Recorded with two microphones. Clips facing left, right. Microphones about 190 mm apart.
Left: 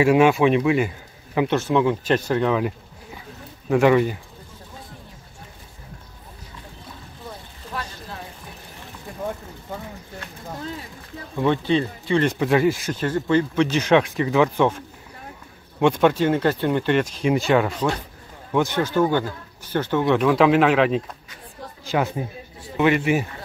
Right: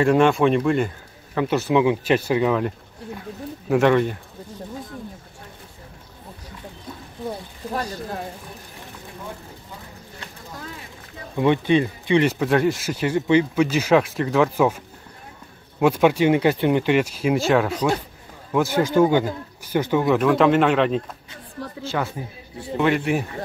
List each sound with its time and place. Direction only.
0.0 s a man's voice: 5° left (ahead or behind)
1.5 s speech: 10° right (ahead or behind)
2.6 s a sound: centre (ahead or behind)
7.7 s a sound: 45° right (ahead or behind)
11.3 s speech: 15° right (ahead or behind)
12.4 s speech: centre (ahead or behind)
15.8 s speech: 10° right (ahead or behind)
21.8 s speech: 15° left (ahead or behind)
22.8 s speech: 5° left (ahead or behind)